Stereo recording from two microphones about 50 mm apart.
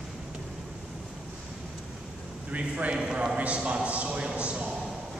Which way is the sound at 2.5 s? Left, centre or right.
Right.